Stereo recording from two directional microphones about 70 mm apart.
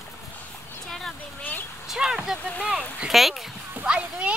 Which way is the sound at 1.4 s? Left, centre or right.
Left.